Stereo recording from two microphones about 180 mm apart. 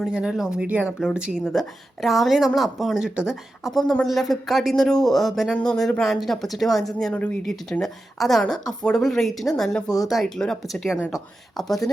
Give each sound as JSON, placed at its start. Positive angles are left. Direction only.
{"t": 0.0, "sound": "speech", "side_deg": -5}
{"t": 9.8, "sound": "speech", "side_deg": 20}
{"t": 10.1, "sound": "speech", "side_deg": 0}